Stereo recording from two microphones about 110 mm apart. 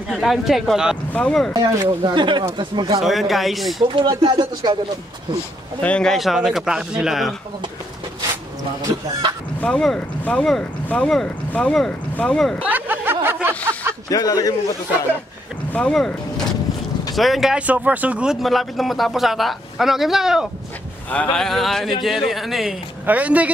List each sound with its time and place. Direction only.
0.2 s speech: centre (ahead or behind)
1.6 s speech: 45° right (ahead or behind)
3.0 s speech: centre (ahead or behind)
3.8 s speech: 50° right (ahead or behind)
5.8 s speech: 10° left (ahead or behind)
6.1 s speech: 5° right (ahead or behind)
8.9 s speech: 50° right (ahead or behind)
9.6 s speech: 5° left (ahead or behind)
12.6 s a sound: 15° right (ahead or behind)
14.0 s a man's voice: 35° left (ahead or behind)
15.7 s speech: 5° left (ahead or behind)
21.1 s speech: 10° left (ahead or behind)
23.0 s a woman's voice: 15° right (ahead or behind)